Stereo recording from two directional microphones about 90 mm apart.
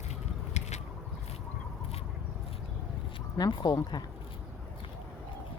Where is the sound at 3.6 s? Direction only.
45° left (ahead or behind).